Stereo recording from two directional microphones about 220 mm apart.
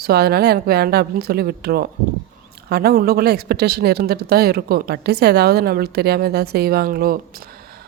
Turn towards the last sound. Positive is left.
turn(degrees=-40)  # may be behind; listen again after turning